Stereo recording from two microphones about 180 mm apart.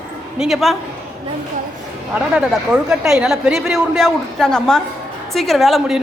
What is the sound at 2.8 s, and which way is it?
Speech, 5° right (ahead or behind).